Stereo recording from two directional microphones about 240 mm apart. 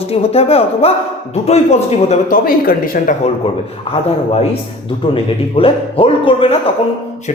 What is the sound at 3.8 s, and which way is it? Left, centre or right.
Speech, left.